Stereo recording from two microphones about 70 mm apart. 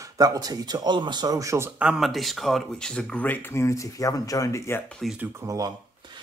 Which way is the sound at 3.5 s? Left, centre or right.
Left.